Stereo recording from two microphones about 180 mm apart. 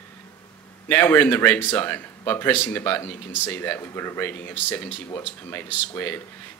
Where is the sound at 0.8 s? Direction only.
10° left (ahead or behind).